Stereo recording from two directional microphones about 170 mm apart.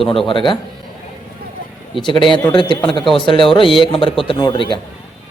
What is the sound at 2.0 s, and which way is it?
Speech, 30° left (ahead or behind).